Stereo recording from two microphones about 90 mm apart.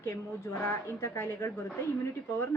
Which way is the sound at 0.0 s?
30° left (ahead or behind).